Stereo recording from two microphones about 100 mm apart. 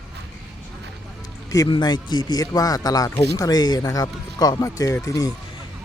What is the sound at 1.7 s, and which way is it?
Speech, 45° left (ahead or behind).